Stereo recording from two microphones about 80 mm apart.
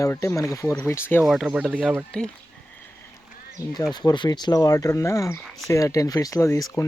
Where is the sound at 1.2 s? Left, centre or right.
Centre.